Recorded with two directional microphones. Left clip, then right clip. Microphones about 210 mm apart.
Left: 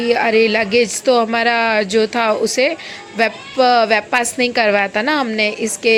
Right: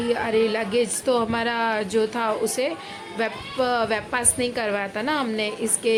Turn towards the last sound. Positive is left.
turn(degrees=20)  # may be behind; listen again after turning